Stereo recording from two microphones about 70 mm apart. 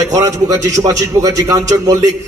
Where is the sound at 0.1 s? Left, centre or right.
Right.